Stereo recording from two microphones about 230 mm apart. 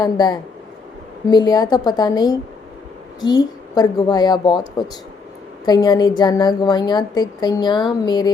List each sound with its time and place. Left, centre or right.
0.0 s a woman's voice: centre